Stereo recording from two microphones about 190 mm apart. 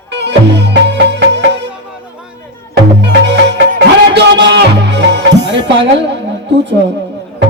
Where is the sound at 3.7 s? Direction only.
60° right (ahead or behind).